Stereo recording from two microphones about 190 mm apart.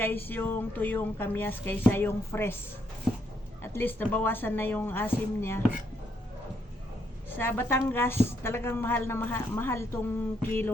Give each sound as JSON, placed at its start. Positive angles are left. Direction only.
{"t": 0.0, "sound": "a woman's voice", "side_deg": 10}
{"t": 3.6, "sound": "a woman's voice", "side_deg": 10}
{"t": 7.3, "sound": "a woman's voice", "side_deg": 10}